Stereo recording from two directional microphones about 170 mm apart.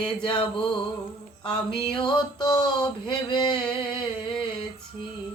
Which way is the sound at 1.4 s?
30° left (ahead or behind).